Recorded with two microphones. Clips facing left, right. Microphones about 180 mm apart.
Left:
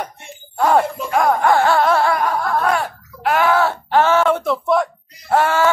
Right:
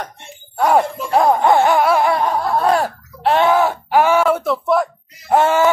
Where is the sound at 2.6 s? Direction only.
30° right (ahead or behind); by 4.8 s centre (ahead or behind).